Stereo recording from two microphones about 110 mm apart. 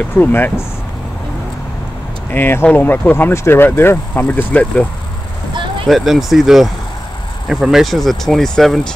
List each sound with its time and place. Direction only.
0.2 s speech: 20° left (ahead or behind)
2.3 s speech: 20° left (ahead or behind)
5.5 s vehicle: 45° right (ahead or behind)
5.9 s speech: centre (ahead or behind)